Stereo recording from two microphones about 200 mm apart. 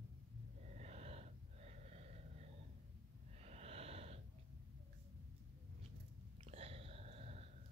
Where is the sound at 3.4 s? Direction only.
30° right (ahead or behind).